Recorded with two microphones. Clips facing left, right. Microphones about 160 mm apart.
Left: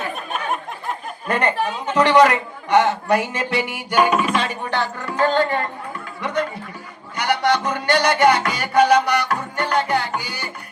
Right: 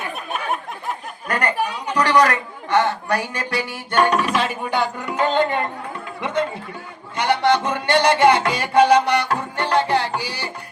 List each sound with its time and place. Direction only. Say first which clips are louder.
0.3 s a sound: right 3 dB; centre (ahead or behind)
1.3 s a woman's voice: left 2 dB; 25° left (ahead or behind); by 5.6 s 20° right (ahead or behind)
6.2 s music: right 1 dB; 25° right (ahead or behind)